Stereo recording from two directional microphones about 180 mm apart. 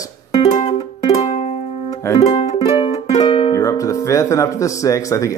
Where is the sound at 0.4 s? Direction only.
35° left (ahead or behind).